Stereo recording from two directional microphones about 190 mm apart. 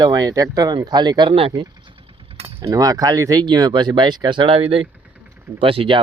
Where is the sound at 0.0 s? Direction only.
20° right (ahead or behind).